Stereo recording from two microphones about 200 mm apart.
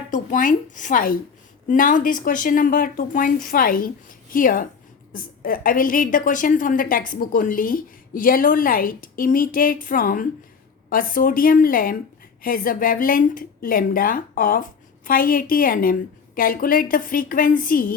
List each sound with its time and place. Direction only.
0.1 s speech: 40° left (ahead or behind)